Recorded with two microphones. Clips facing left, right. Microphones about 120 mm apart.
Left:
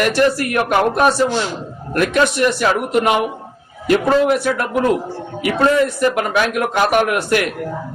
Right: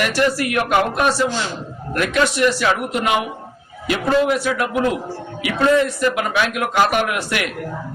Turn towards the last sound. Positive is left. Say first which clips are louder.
# left 5 dB
turn(degrees=45)  # may be behind; listen again after turning